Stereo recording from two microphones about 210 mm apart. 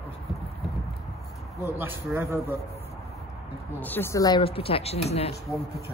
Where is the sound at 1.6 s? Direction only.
10° right (ahead or behind).